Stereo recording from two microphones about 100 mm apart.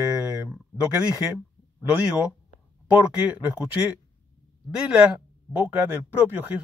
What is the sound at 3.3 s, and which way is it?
Speech, 20° right (ahead or behind).